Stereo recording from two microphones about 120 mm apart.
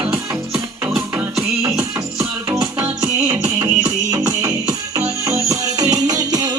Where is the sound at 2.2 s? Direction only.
25° right (ahead or behind).